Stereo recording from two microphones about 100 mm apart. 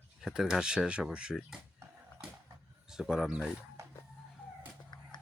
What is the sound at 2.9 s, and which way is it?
Speech, 5° right (ahead or behind).